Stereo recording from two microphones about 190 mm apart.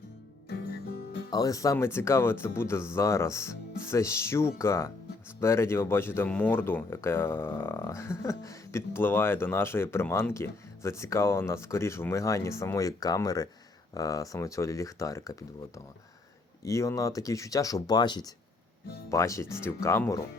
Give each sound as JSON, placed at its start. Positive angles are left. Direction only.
{"t": 1.3, "sound": "speech", "side_deg": 20}
{"t": 16.6, "sound": "speech", "side_deg": 15}